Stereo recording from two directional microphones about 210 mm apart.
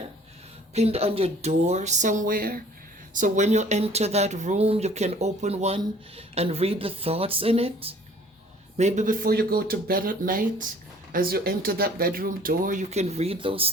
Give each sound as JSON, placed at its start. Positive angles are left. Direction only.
{"t": 0.7, "sound": "speech", "side_deg": -30}